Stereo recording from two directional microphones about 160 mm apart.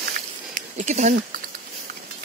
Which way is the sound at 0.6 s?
50° right (ahead or behind).